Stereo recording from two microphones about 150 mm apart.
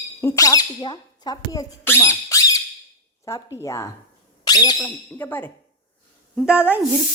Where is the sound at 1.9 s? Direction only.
20° left (ahead or behind).